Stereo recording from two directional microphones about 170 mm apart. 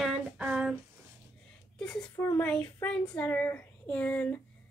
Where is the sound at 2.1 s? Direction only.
15° left (ahead or behind).